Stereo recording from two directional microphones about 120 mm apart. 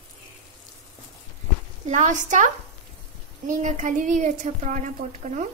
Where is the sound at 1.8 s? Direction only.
90° right.